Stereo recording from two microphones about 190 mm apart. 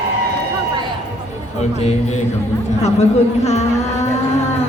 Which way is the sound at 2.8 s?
35° left (ahead or behind).